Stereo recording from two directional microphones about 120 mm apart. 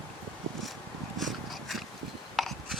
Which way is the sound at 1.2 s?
Centre (ahead or behind).